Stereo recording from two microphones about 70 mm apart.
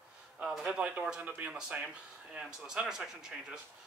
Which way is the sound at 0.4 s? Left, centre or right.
Centre.